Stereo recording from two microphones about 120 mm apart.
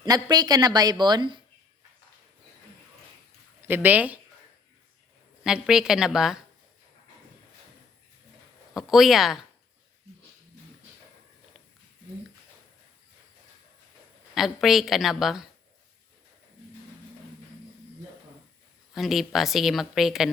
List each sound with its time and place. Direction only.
0.0 s a woman's voice: 35° right (ahead or behind)
3.6 s speech: 15° right (ahead or behind)
5.4 s a woman's voice: 5° right (ahead or behind)
8.7 s a woman's voice: centre (ahead or behind)
14.3 s a woman's voice: centre (ahead or behind)
18.9 s a woman's voice: centre (ahead or behind)